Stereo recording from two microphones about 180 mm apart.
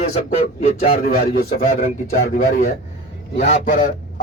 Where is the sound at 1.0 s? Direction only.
55° left (ahead or behind).